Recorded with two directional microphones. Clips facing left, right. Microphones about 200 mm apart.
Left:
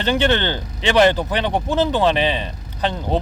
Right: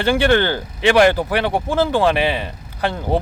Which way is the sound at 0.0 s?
10° right (ahead or behind).